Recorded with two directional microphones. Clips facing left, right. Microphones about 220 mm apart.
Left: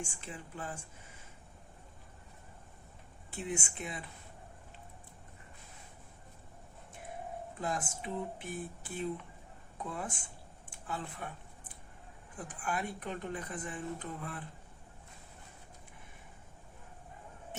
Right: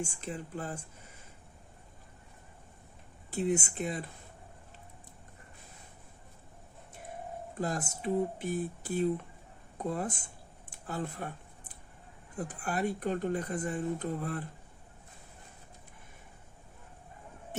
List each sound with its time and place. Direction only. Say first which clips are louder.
0.0 s speech: right 6 dB; 40° right (ahead or behind)
3.2 s speech: right 8 dB; 40° right (ahead or behind)
7.6 s speech: right 4 dB; 40° right (ahead or behind)
12.4 s speech: right 5 dB; 40° right (ahead or behind)